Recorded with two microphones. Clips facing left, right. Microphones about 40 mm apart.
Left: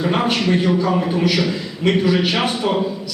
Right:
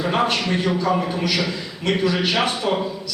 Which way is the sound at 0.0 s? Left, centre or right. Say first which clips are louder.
Left 2 dB; centre.